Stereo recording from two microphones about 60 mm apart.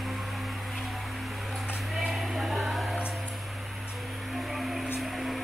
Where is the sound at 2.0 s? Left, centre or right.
Centre.